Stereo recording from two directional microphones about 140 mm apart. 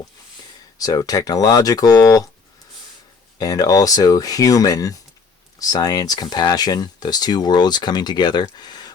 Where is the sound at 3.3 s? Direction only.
25° left (ahead or behind).